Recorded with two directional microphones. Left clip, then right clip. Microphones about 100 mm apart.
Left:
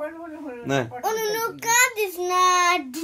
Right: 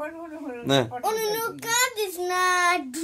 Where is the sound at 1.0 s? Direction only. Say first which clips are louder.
Left 1 dB; 15° right (ahead or behind).